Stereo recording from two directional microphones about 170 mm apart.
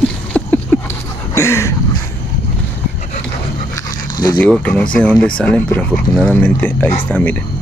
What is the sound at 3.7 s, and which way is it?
Dog, 20° left (ahead or behind).